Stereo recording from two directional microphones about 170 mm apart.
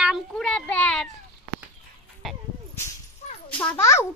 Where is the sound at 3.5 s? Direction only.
10° left (ahead or behind).